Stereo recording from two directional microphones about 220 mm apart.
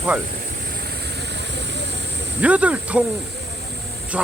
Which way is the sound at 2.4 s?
5° right (ahead or behind).